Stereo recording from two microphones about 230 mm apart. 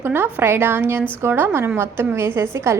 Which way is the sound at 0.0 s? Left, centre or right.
Centre.